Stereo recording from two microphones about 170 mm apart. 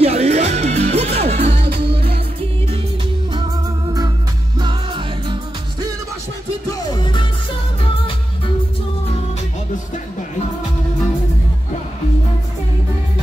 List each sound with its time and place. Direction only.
0.0 s music: 40° right (ahead or behind)
4.6 s music: 30° right (ahead or behind)
7.0 s music: 25° left (ahead or behind)